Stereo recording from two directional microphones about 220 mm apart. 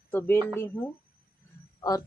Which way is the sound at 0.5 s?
10° left (ahead or behind).